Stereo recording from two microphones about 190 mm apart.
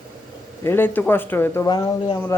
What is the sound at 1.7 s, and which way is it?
Speech, 25° left (ahead or behind).